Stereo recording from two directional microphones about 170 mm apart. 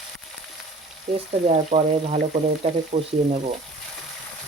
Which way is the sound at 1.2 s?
40° right (ahead or behind).